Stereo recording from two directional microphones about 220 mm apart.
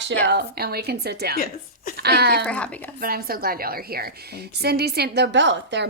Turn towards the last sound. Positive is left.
turn(degrees=-55)  # may be behind; listen again after turning